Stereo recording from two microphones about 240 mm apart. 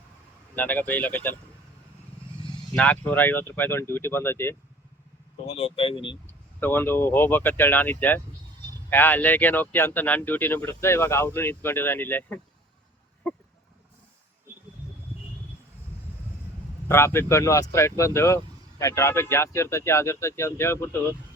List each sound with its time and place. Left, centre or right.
0.5 s speech: centre
2.7 s speech: centre
5.5 s speech: left
6.6 s speech: centre
16.9 s speech: centre